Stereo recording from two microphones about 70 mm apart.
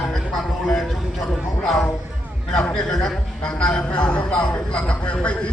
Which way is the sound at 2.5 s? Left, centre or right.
Centre.